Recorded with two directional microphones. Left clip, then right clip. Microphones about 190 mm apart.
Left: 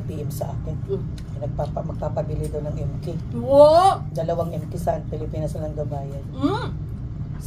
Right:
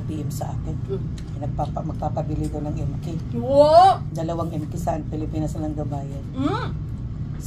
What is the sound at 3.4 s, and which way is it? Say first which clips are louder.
Speech: even; 15° left (ahead or behind).